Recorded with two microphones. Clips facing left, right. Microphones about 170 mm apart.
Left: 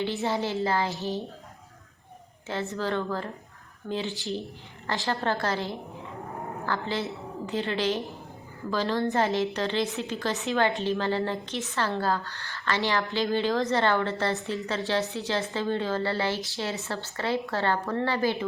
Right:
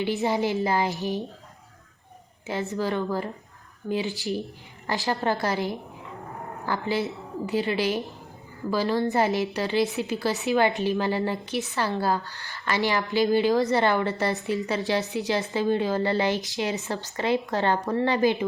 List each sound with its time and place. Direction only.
0.0 s a woman's voice: 15° right (ahead or behind)
2.7 s a woman's voice: 10° right (ahead or behind)